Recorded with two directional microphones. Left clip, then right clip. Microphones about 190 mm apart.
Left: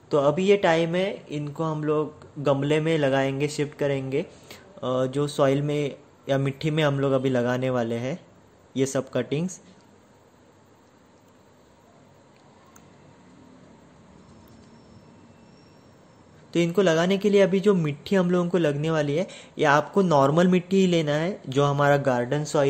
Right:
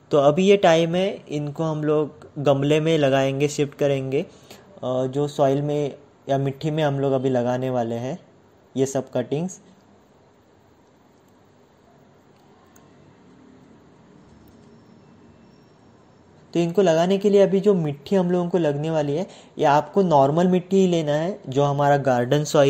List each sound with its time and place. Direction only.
0.1 s speech: 15° right (ahead or behind)
4.7 s a woman's voice: centre (ahead or behind)
16.4 s a woman's voice: centre (ahead or behind)
22.2 s speech: 20° right (ahead or behind)